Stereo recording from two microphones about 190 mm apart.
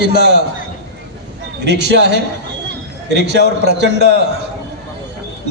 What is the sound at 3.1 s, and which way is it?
A man's voice, 65° right (ahead or behind).